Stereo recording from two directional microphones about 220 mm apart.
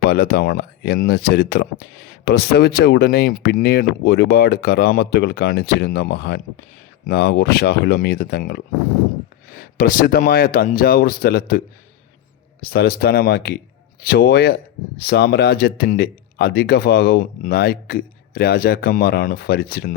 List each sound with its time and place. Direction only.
0.0 s speech: 45° left (ahead or behind)
12.6 s speech: 45° left (ahead or behind)